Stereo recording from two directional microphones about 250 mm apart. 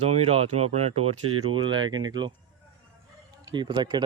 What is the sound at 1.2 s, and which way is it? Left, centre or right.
Speech, right.